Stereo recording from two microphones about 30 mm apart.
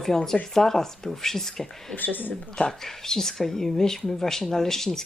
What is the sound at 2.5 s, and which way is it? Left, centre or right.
Speech, centre.